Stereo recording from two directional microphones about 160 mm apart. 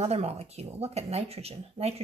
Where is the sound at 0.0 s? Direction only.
40° right (ahead or behind).